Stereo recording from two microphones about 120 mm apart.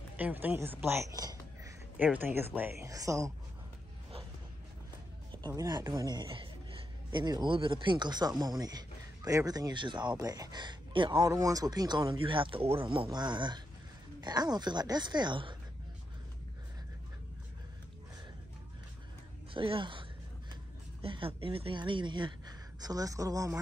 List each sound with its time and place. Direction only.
0.2 s a woman's voice: 15° right (ahead or behind)
1.1 s a sound: 30° right (ahead or behind)
2.1 s a woman's voice: 15° right (ahead or behind)
2.9 s speech: 30° right (ahead or behind)
5.6 s a man's voice: 35° right (ahead or behind)
11.2 s speech: 30° right (ahead or behind)
19.5 s a woman's voice: 45° right (ahead or behind); by 23.5 s 30° right (ahead or behind)